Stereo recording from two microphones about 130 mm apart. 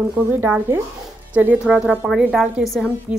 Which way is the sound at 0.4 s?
15° right (ahead or behind).